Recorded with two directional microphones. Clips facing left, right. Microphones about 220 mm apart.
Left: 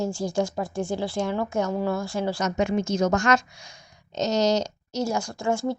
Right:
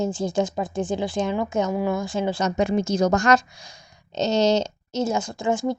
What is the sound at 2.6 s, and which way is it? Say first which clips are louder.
A woman's voice: right 2 dB; 35° right (ahead or behind).